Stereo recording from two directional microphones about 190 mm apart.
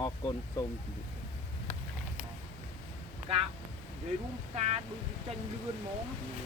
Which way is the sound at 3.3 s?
30° right (ahead or behind).